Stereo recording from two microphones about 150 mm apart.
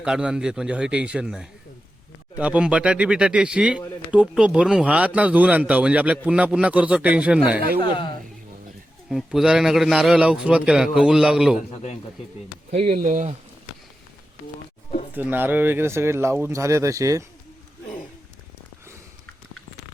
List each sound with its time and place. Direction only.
0.0 s speech: 5° right (ahead or behind)
7.8 s speech: 35° left (ahead or behind)
9.0 s a man's voice: centre (ahead or behind)
12.9 s speech: 65° right (ahead or behind)
15.1 s speech: 10° right (ahead or behind)